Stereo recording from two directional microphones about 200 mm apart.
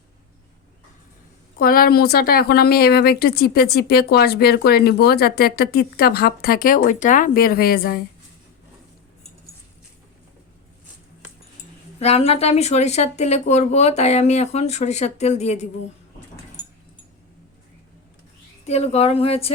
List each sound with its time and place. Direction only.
1.5 s a woman's voice: 45° left (ahead or behind)
11.9 s speech: 30° left (ahead or behind)
18.6 s speech: 30° left (ahead or behind)